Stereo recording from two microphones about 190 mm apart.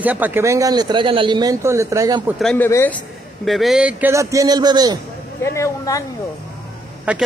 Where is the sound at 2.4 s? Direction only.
10° left (ahead or behind).